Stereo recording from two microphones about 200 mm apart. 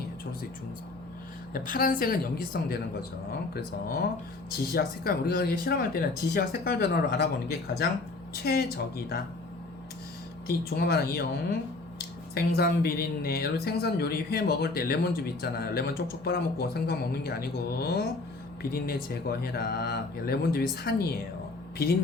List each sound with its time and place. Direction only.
1.5 s speech: 45° left (ahead or behind)
10.7 s speech: 50° left (ahead or behind)
12.3 s speech: 50° left (ahead or behind)